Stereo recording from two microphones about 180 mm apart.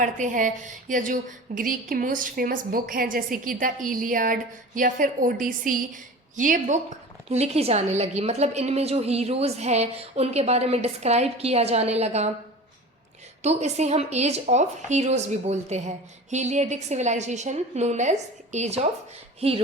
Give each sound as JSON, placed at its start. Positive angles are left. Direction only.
{"t": 0.0, "sound": "a woman's voice", "side_deg": -45}
{"t": 13.4, "sound": "a woman's voice", "side_deg": -40}